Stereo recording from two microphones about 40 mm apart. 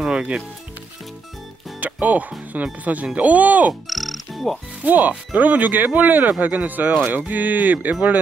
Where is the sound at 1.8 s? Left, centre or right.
Right.